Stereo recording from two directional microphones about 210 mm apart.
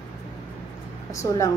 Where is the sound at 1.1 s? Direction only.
15° left (ahead or behind).